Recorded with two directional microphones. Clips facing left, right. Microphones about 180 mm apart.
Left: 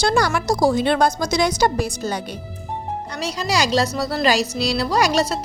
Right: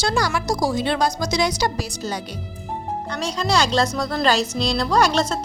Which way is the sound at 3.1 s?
10° left (ahead or behind).